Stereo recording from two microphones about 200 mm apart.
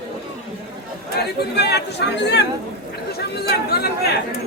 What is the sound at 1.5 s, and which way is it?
Speech, 55° left (ahead or behind).